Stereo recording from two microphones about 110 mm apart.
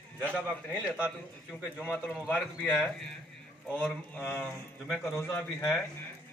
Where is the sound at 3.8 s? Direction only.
10° left (ahead or behind).